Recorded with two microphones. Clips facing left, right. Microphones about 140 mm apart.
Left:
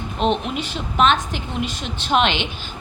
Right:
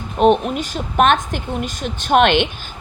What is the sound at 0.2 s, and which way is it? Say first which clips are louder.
A woman's voice: right 7 dB; 50° right (ahead or behind).